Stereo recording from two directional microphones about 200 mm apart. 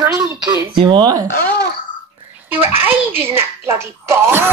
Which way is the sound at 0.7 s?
25° right (ahead or behind).